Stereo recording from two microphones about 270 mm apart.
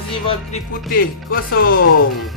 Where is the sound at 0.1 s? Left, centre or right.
Left.